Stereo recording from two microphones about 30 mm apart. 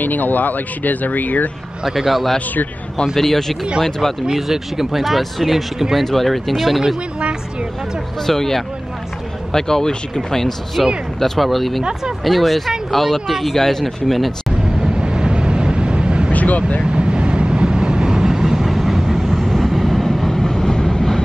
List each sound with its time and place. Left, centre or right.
0.0 s speech: left
1.9 s speech: centre
3.2 s speech: centre
4.4 s speech: centre
6.0 s speech: centre
8.3 s speech: centre
10.8 s speech: centre
11.1 s speech: centre
13.6 s speech: centre
15.0 s vehicle: right
16.3 s vehicle: left
16.8 s vehicle: right; by 21.2 s centre